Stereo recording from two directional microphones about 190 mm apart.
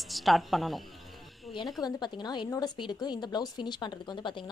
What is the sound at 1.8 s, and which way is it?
Speech, 20° left (ahead or behind).